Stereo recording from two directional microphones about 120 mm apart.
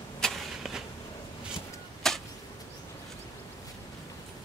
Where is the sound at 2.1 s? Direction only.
5° left (ahead or behind).